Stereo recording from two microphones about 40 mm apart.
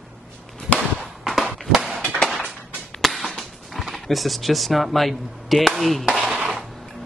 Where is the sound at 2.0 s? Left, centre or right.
Centre.